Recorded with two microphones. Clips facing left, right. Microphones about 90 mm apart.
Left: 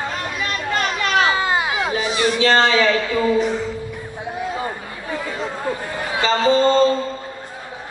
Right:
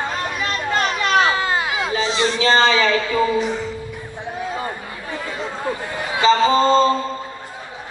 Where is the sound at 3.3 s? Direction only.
Centre (ahead or behind).